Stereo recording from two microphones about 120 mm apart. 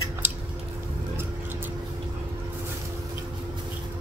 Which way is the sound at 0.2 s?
15° right (ahead or behind).